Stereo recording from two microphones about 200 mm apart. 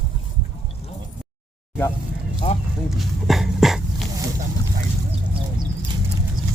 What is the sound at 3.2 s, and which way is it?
Speech, centre (ahead or behind).